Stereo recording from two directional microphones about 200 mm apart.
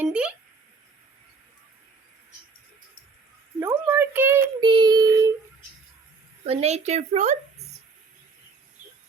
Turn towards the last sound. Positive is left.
turn(degrees=-35)  # may be behind; listen again after turning